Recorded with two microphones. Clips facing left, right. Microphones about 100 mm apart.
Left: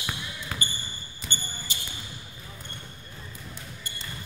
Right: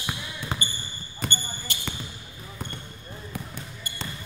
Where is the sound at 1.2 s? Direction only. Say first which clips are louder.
Right 6 dB; 55° right (ahead or behind).